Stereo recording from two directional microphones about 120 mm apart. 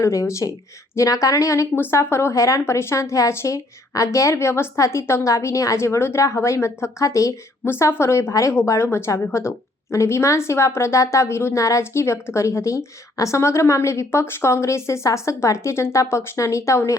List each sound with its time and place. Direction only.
0.0 s a woman's voice: 25° left (ahead or behind)